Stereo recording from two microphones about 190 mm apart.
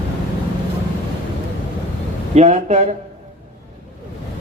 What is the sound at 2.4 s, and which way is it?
Speech, 35° right (ahead or behind).